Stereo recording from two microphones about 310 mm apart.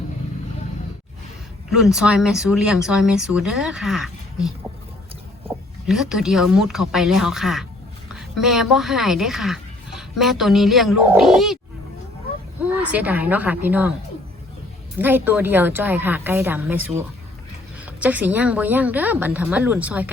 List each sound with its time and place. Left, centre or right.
1.7 s a woman's voice: centre
12.6 s speech: centre
14.9 s speech: centre
18.0 s speech: centre